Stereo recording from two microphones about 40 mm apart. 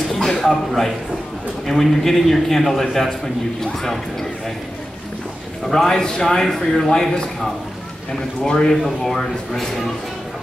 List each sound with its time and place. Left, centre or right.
0.1 s a sound: centre
1.7 s a man's voice: centre
5.7 s a man's voice: centre
6.9 s a man's voice: centre
8.5 s a man's voice: centre